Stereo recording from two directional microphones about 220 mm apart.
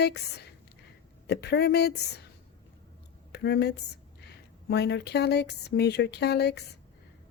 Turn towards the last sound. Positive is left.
turn(degrees=50)  # may be behind; listen again after turning